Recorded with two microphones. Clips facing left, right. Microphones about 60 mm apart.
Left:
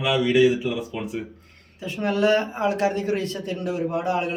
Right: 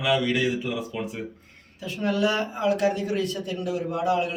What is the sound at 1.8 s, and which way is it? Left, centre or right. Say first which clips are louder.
A man's voice: left 3 dB; left.